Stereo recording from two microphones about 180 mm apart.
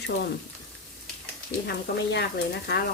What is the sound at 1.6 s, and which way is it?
Speech, 65° left (ahead or behind).